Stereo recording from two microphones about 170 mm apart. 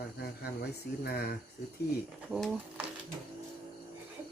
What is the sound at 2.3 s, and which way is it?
Speech, centre (ahead or behind).